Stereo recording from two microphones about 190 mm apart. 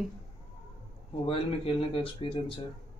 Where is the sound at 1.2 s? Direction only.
30° left (ahead or behind).